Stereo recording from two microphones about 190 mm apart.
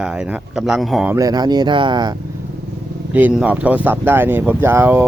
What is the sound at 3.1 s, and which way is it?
Speech, 5° right (ahead or behind).